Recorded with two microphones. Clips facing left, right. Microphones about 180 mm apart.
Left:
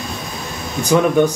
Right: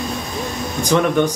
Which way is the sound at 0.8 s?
10° left (ahead or behind).